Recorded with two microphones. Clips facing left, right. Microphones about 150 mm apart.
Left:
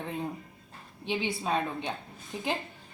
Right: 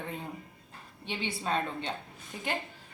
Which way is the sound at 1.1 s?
15° left (ahead or behind).